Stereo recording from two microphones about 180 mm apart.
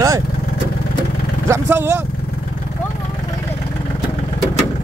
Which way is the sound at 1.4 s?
15° right (ahead or behind).